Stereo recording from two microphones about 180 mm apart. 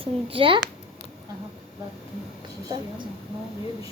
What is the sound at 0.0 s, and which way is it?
Speech, 30° right (ahead or behind).